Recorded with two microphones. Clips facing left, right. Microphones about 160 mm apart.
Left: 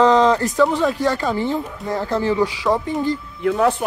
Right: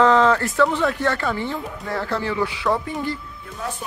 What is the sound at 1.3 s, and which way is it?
Speech, 35° left (ahead or behind).